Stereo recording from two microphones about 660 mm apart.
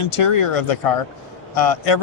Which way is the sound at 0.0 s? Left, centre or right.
Left.